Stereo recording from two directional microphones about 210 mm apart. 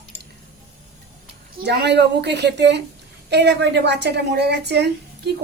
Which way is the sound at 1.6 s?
55° right (ahead or behind).